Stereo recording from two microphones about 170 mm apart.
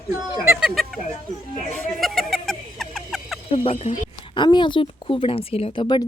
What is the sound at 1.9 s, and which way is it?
Vehicle, centre (ahead or behind).